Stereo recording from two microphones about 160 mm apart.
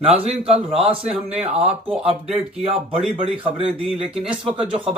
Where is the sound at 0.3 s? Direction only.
40° right (ahead or behind).